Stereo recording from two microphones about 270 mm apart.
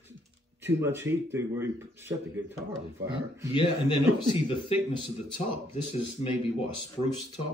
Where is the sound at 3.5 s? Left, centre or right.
Centre.